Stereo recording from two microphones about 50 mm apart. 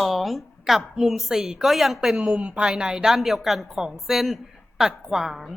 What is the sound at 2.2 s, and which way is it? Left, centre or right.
A woman's voice, right.